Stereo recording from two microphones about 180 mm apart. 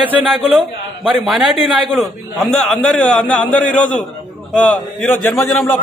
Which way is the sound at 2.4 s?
5° left (ahead or behind).